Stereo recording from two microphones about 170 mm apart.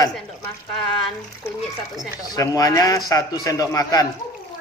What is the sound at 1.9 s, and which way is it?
A man's voice, 20° left (ahead or behind).